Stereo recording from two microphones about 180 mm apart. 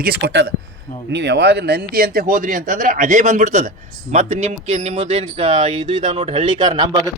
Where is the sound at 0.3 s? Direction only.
70° right (ahead or behind).